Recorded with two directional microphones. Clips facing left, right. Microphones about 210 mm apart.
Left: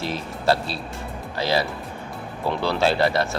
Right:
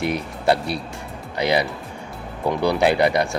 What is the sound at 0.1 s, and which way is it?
Speech, 20° right (ahead or behind).